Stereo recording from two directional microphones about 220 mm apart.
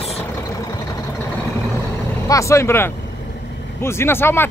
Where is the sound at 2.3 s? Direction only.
15° left (ahead or behind).